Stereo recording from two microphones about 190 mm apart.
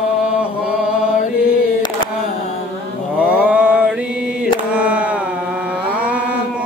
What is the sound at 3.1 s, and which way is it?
Mantra, 5° right (ahead or behind).